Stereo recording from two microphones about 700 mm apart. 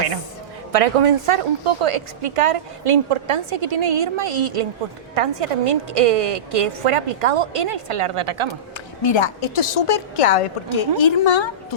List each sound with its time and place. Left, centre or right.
0.7 s a woman's voice: right
9.0 s a woman's voice: left